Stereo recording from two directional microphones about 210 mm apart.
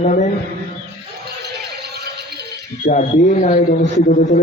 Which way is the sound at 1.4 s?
50° right (ahead or behind).